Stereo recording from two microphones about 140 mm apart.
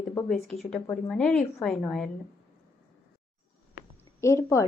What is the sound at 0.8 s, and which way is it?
Speech, 10° left (ahead or behind).